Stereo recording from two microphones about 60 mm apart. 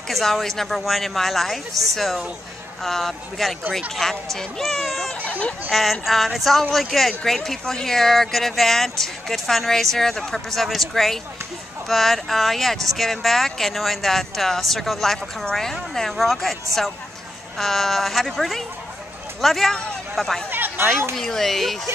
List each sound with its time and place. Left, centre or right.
0.1 s speech: centre
2.8 s speech: centre
5.2 s a sound: left
5.7 s speech: centre
17.6 s speech: centre
20.4 s chatter: right
21.2 s speech: centre